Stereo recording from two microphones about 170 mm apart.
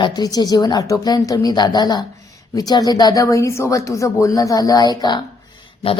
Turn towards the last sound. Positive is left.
turn(degrees=35)  # may be behind; listen again after turning